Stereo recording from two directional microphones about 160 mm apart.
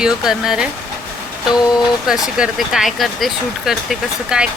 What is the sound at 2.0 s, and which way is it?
Speech, 5° right (ahead or behind).